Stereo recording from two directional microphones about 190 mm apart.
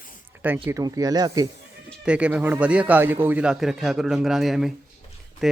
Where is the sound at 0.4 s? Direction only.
10° right (ahead or behind).